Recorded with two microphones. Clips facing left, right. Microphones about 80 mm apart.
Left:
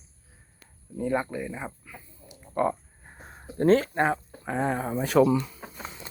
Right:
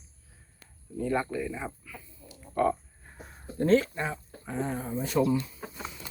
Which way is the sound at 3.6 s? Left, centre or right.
Left.